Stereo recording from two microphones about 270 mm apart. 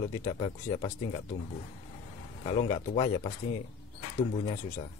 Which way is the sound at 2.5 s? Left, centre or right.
Left.